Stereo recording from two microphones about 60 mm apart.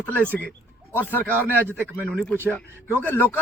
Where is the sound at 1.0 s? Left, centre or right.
Left.